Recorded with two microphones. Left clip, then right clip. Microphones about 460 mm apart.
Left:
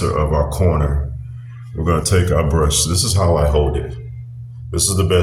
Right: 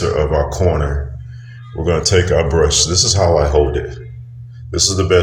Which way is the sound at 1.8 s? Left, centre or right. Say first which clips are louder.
Right 4 dB; left.